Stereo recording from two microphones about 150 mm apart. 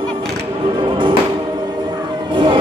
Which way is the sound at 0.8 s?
35° right (ahead or behind).